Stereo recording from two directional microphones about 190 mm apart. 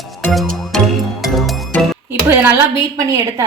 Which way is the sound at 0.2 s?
Centre (ahead or behind).